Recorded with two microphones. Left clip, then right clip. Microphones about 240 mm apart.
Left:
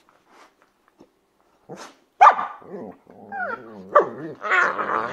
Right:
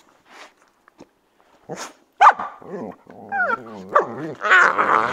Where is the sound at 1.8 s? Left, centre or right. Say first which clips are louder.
Even; right.